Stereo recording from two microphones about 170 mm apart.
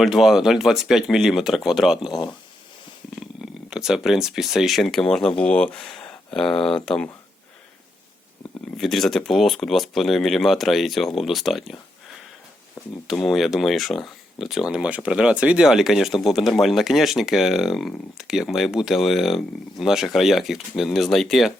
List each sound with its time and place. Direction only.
0.0 s speech: centre (ahead or behind)
2.0 s speech: 25° left (ahead or behind)
3.2 s speech: 5° right (ahead or behind)
8.8 s speech: centre (ahead or behind)
13.1 s speech: centre (ahead or behind)